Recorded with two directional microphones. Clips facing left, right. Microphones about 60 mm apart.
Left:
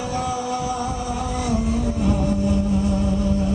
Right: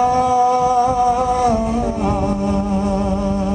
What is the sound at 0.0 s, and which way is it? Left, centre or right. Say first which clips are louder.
Music: right 11 dB; right.